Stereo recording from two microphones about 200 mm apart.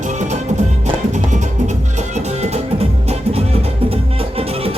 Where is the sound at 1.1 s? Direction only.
35° right (ahead or behind).